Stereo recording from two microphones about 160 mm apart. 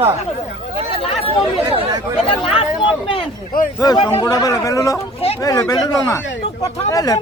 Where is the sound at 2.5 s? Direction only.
35° left (ahead or behind).